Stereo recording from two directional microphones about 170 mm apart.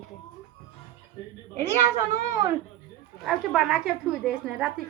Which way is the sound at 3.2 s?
Centre (ahead or behind).